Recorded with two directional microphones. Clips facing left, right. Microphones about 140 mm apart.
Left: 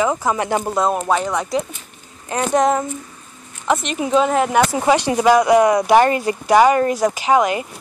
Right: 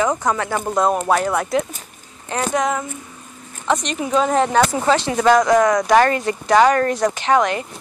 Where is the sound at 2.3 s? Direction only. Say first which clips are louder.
Left 3 dB; 15° left (ahead or behind).